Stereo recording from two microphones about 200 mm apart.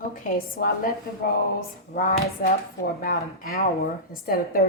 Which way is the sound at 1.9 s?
45° left (ahead or behind).